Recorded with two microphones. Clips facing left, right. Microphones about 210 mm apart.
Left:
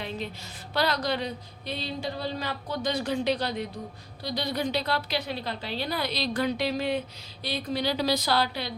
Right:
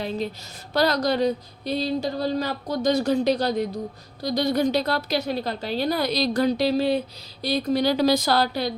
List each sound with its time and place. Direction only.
0.0 s a woman's voice: 40° right (ahead or behind)